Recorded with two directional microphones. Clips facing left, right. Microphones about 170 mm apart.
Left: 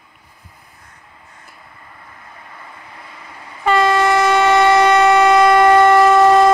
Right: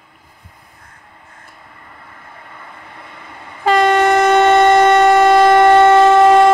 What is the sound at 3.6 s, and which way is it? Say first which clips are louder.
Train: right 2 dB; 45° right (ahead or behind).